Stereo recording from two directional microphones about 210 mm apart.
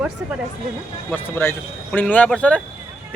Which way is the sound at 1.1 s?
10° left (ahead or behind).